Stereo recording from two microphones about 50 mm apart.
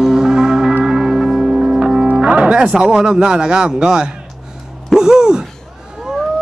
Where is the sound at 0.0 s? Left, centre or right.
Centre.